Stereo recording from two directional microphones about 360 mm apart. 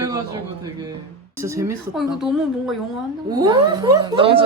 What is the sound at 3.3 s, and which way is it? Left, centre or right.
Speech, centre.